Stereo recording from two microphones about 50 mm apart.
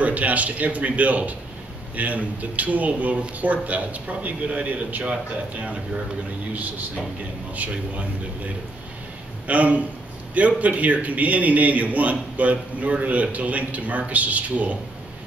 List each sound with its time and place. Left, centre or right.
0.0 s a man's voice: right
7.5 s a man's voice: right
9.5 s a man's voice: right